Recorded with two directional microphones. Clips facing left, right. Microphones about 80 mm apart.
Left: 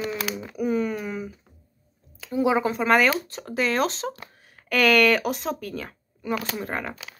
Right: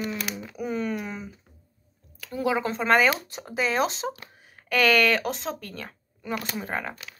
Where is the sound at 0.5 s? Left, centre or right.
Centre.